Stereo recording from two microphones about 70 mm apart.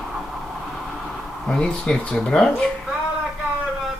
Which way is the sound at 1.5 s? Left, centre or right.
Centre.